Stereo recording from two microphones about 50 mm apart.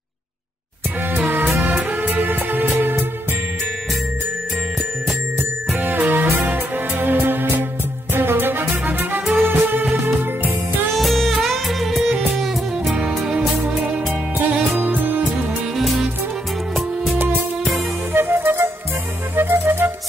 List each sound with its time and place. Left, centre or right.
1.2 s music: right
5.8 s music: right
7.2 s music: right
8.1 s music: right
11.0 s music: centre
14.7 s music: right
15.8 s music: centre
18.1 s music: right